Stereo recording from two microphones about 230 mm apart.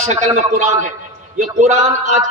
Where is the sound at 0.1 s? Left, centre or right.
Right.